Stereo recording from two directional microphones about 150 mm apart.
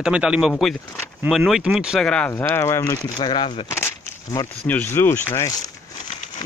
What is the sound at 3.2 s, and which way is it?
Speech, 30° left (ahead or behind).